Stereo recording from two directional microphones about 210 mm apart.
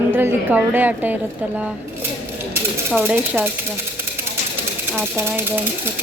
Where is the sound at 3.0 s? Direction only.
10° right (ahead or behind).